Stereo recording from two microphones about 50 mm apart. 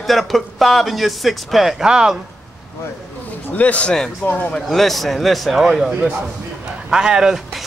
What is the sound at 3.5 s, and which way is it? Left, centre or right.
A man's voice, left.